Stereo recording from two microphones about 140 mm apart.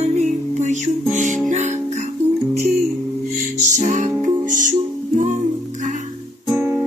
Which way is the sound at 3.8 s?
60° right (ahead or behind).